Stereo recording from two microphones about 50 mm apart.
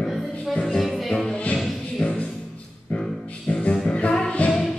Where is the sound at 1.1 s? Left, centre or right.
Centre.